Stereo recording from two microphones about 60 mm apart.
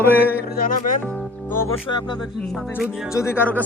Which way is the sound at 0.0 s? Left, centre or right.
Left.